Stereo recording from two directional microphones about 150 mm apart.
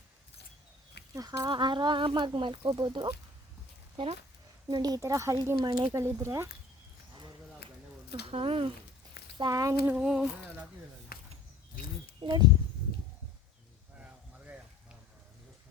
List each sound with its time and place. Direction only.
1.1 s speech: 25° right (ahead or behind)
4.7 s speech: 25° right (ahead or behind)
8.3 s speech: 40° right (ahead or behind)
9.4 s speech: 25° right (ahead or behind)
9.8 s speech: 10° right (ahead or behind)
10.2 s a sound: 15° right (ahead or behind)
11.1 s a sound: 90° left
12.2 s speech: 30° right (ahead or behind)
14.0 s a sound: 10° right (ahead or behind)